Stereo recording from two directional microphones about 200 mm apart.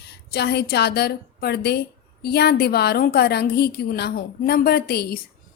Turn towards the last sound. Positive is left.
turn(degrees=50)  # may be behind; listen again after turning